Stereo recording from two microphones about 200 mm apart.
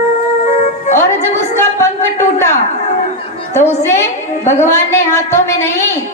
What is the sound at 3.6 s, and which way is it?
A woman's voice, 10° left (ahead or behind).